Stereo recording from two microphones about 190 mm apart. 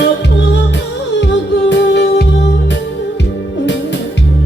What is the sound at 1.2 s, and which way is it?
Music, 70° left (ahead or behind).